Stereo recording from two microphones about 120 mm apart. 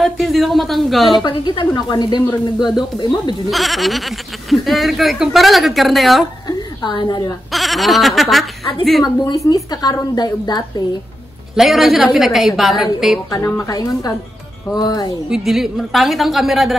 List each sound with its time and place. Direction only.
0.0 s speech: centre (ahead or behind)
1.2 s a woman's voice: 40° left (ahead or behind)
3.4 s speech: centre (ahead or behind)
6.4 s a sound: 40° left (ahead or behind)
7.5 s speech: centre (ahead or behind)
9.0 s a woman's voice: 30° left (ahead or behind)
11.5 s speech: centre (ahead or behind)
13.3 s a woman's voice: 25° left (ahead or behind)
15.2 s speech: 5° right (ahead or behind)